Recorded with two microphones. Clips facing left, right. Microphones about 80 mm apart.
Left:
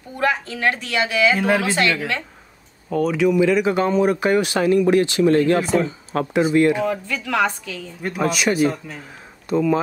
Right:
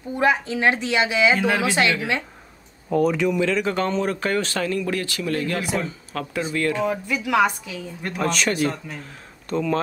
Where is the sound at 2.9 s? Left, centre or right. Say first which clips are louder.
Left 2 dB; centre.